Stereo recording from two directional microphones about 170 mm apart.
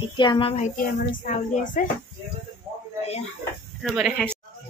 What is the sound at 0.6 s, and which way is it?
Speech, 55° left (ahead or behind).